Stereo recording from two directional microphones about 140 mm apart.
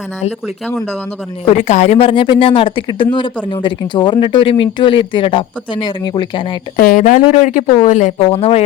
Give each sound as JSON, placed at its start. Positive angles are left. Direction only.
{"t": 0.3, "sound": "speech", "side_deg": -5}
{"t": 1.5, "sound": "speech", "side_deg": 55}
{"t": 2.0, "sound": "speech", "side_deg": 40}
{"t": 6.7, "sound": "speech", "side_deg": 75}
{"t": 8.2, "sound": "speech", "side_deg": 40}